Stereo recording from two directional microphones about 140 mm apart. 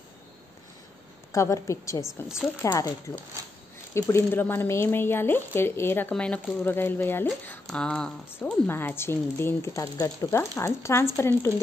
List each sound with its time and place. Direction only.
1.3 s a woman's voice: 20° left (ahead or behind)
2.0 s a woman's voice: 5° right (ahead or behind)
2.6 s a woman's voice: 20° left (ahead or behind)
3.9 s a woman's voice: 15° left (ahead or behind)